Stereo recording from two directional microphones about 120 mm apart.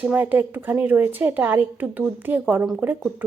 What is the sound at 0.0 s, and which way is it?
A woman's voice, 15° right (ahead or behind).